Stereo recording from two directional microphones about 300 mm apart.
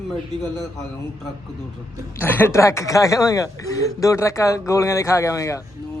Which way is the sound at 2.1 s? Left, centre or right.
Centre.